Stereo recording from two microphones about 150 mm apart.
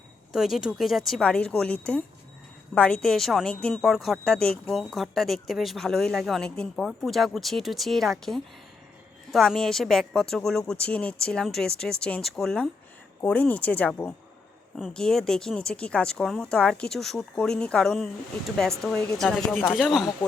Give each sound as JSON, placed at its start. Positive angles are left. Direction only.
{"t": 0.3, "sound": "speech", "side_deg": 0}